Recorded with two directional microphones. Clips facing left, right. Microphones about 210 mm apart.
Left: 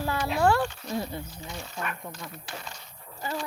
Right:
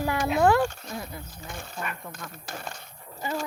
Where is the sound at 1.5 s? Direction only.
50° right (ahead or behind).